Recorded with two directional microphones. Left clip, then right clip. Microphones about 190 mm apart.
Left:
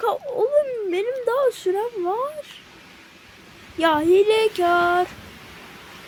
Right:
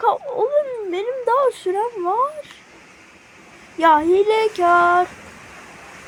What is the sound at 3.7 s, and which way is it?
Speech, 5° left (ahead or behind).